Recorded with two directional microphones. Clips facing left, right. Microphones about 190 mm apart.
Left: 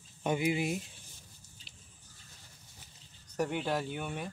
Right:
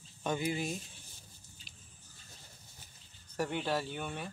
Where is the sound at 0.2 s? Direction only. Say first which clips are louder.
Left 4 dB; 15° left (ahead or behind).